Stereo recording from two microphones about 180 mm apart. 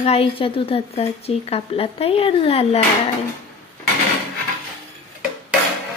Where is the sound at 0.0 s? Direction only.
35° left (ahead or behind).